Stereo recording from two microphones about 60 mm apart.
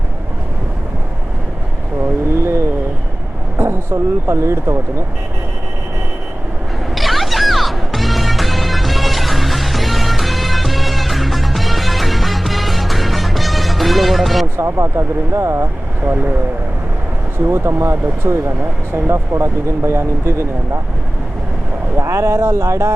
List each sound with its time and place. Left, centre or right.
2.4 s vehicle: right
3.6 s speech: right
6.9 s music: centre
14.5 s speech: right
17.3 s speech: right
21.9 s speech: right